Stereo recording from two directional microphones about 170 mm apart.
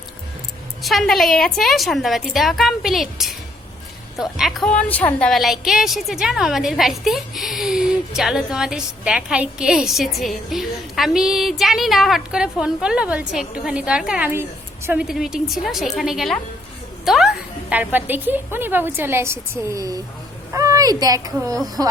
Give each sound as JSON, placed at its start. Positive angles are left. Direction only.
{"t": 0.8, "sound": "a woman's voice", "side_deg": 0}
{"t": 4.8, "sound": "a woman's voice", "side_deg": 10}